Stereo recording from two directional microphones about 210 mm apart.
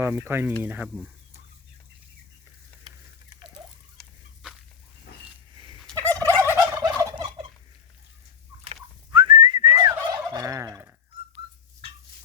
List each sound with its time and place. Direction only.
0.0 s speech: 10° right (ahead or behind)
4.4 s dog: 5° right (ahead or behind)
5.5 s turkey: 25° right (ahead or behind)
6.0 s gobble: 10° left (ahead or behind)
6.5 s fowl: 15° right (ahead or behind)
8.6 s gobble: 25° right (ahead or behind)